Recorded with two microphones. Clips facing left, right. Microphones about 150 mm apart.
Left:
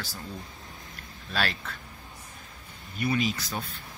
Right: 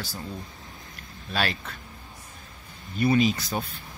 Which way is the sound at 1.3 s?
10° right (ahead or behind).